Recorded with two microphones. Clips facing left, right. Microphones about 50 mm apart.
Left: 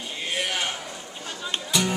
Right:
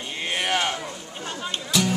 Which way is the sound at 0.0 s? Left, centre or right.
Right.